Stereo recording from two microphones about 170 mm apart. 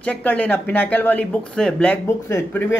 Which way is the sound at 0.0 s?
10° left (ahead or behind).